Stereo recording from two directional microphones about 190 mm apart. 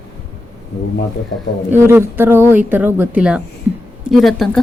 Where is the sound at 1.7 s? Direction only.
10° right (ahead or behind).